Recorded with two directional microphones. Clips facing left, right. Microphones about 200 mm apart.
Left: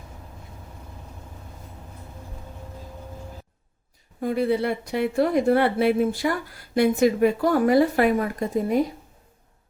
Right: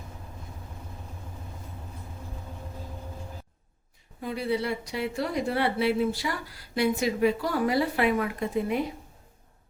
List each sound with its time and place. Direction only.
4.2 s speech: 50° left (ahead or behind)